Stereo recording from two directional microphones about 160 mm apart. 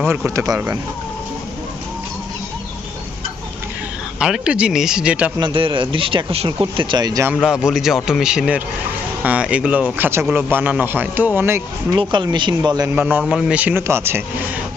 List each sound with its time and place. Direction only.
0.0 s speech: 15° right (ahead or behind)
4.2 s a man's voice: 5° right (ahead or behind)
5.4 s a man's voice: 30° right (ahead or behind)
7.3 s a man's voice: 5° right (ahead or behind)
11.9 s a man's voice: 30° right (ahead or behind)
12.9 s speech: 10° right (ahead or behind)